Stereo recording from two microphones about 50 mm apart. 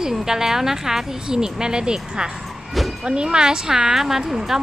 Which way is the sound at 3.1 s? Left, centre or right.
Centre.